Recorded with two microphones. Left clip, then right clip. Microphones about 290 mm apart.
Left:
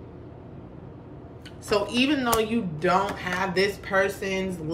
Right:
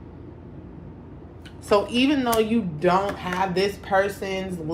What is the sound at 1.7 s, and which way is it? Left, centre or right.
A woman's voice, centre.